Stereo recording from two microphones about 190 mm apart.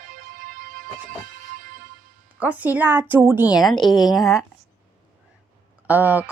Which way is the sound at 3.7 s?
20° left (ahead or behind).